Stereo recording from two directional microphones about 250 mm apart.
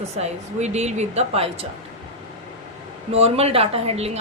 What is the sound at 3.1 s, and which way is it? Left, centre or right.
A woman's voice, right.